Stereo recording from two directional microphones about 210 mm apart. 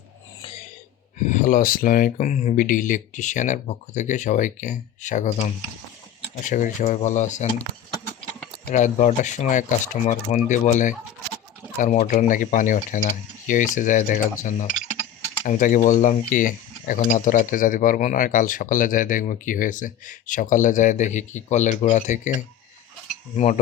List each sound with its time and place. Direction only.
1.2 s speech: 35° left (ahead or behind)